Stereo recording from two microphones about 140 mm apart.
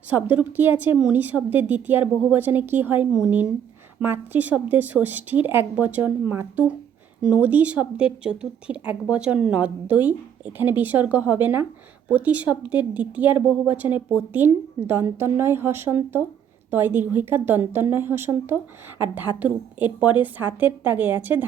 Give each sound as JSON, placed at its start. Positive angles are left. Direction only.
{"t": 0.1, "sound": "a woman's voice", "side_deg": -10}